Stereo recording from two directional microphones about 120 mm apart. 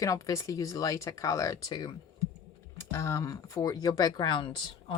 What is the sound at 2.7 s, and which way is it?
Speech, 25° left (ahead or behind).